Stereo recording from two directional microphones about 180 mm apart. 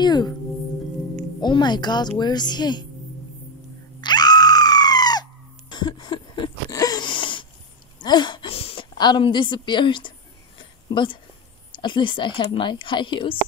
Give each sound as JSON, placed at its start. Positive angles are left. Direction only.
{"t": 0.0, "sound": "singing bowl", "side_deg": 25}
{"t": 1.4, "sound": "a woman's voice", "side_deg": 25}
{"t": 4.0, "sound": "screaming", "side_deg": 25}
{"t": 8.0, "sound": "a woman's voice", "side_deg": 25}
{"t": 10.6, "sound": "a sound", "side_deg": 25}
{"t": 11.7, "sound": "a woman's voice", "side_deg": 25}